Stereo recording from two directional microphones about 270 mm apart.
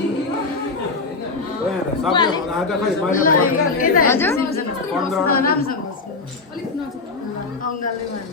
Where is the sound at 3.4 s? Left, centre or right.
Left.